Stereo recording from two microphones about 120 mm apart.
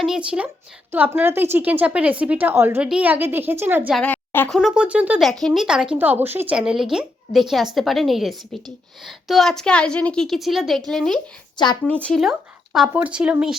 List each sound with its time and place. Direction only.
0.0 s a woman's voice: 5° right (ahead or behind)
3.9 s a woman's voice: 10° left (ahead or behind)
4.4 s a woman's voice: 5° left (ahead or behind)
4.7 s a woman's voice: 10° right (ahead or behind)
5.2 s a woman's voice: 5° left (ahead or behind)
5.6 s a woman's voice: 5° right (ahead or behind)
11.5 s speech: 40° left (ahead or behind)
12.0 s a woman's voice: centre (ahead or behind)